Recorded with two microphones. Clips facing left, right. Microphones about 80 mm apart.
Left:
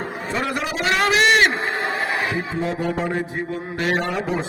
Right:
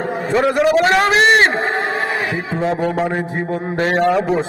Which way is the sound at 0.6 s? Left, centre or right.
Right.